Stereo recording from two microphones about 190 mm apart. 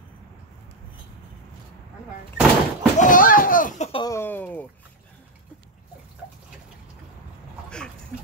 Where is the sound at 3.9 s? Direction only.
25° left (ahead or behind).